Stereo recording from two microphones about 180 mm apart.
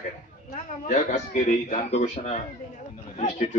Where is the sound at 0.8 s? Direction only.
40° left (ahead or behind).